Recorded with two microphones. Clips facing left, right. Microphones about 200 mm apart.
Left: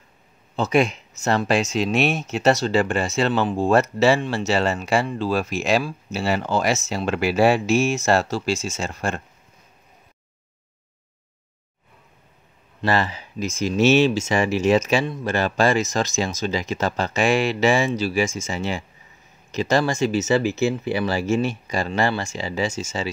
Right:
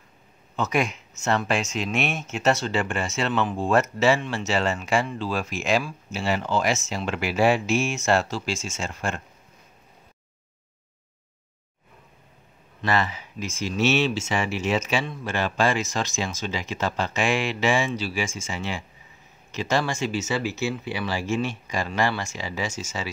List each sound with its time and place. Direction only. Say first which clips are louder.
0.6 s speech: left 5 dB; 30° left (ahead or behind)
12.8 s speech: left 3 dB; 35° left (ahead or behind)
21.6 s speech: left 3 dB; 35° left (ahead or behind)